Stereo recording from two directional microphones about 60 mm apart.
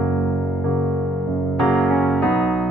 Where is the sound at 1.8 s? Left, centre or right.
Centre.